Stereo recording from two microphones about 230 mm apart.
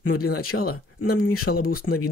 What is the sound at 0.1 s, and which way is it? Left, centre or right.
Speech, left.